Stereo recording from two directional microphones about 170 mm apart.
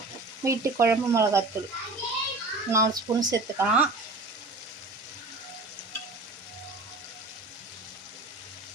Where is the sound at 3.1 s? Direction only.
30° right (ahead or behind).